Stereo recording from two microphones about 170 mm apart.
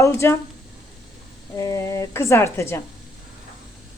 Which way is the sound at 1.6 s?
20° left (ahead or behind).